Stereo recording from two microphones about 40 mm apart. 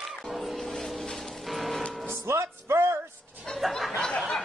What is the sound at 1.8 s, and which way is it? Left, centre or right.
Music, left.